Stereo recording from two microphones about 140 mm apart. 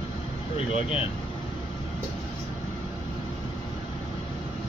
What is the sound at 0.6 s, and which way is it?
Speech, 40° left (ahead or behind).